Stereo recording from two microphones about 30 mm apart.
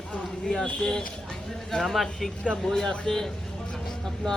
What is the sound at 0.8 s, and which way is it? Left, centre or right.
Speech, left.